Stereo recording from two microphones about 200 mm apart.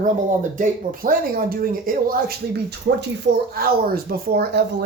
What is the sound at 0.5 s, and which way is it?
Speech, 45° right (ahead or behind).